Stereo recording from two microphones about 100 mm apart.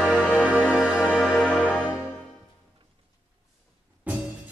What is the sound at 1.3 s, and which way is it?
Music, 15° left (ahead or behind).